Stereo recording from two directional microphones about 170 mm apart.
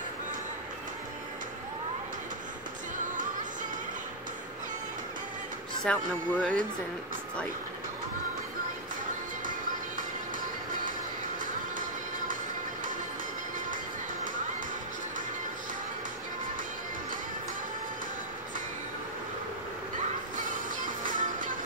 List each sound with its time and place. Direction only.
5.9 s speech: 5° left (ahead or behind)
20.3 s music: 50° right (ahead or behind)